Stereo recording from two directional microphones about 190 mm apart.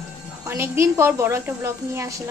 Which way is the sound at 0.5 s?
15° right (ahead or behind).